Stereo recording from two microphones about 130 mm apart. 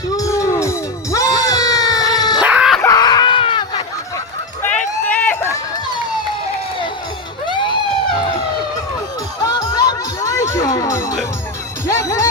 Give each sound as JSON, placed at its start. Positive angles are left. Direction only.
{"t": 0.2, "sound": "music", "side_deg": 25}
{"t": 2.4, "sound": "a sound", "side_deg": -10}
{"t": 2.8, "sound": "screaming", "side_deg": 30}
{"t": 4.6, "sound": "run", "side_deg": 10}
{"t": 7.4, "sound": "a sound", "side_deg": 40}
{"t": 9.4, "sound": "music", "side_deg": 30}